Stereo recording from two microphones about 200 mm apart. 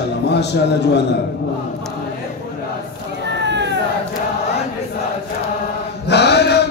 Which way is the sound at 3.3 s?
60° right (ahead or behind).